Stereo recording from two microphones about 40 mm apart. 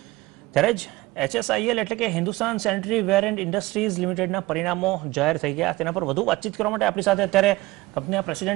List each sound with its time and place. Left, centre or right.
0.5 s speech: centre